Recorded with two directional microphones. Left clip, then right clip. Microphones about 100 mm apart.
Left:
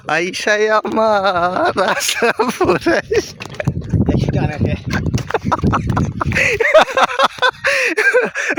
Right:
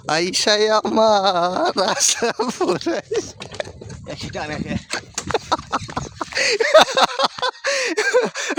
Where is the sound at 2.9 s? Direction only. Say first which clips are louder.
Left 7 dB; 40° left (ahead or behind).